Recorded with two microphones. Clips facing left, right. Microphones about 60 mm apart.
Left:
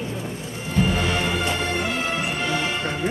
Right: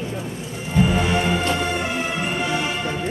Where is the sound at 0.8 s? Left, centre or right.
Centre.